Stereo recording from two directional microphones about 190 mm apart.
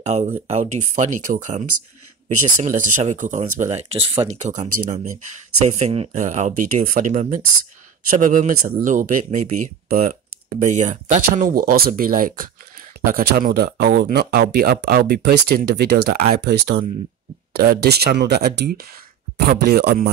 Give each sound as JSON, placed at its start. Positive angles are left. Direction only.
{"t": 0.0, "sound": "speech", "side_deg": -35}